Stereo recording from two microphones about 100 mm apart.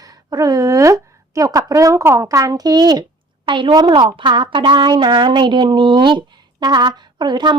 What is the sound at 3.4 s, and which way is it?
A woman's voice, 55° right (ahead or behind).